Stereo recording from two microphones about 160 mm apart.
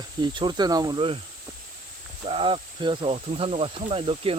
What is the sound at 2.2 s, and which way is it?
Speech, 35° right (ahead or behind).